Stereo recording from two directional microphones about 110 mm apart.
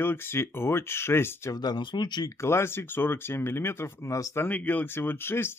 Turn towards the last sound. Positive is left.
turn(degrees=20)  # may be behind; listen again after turning